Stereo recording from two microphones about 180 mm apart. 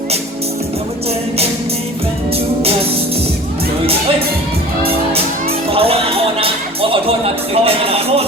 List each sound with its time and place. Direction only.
5.7 s music: 30° right (ahead or behind)
7.5 s speech: 35° right (ahead or behind)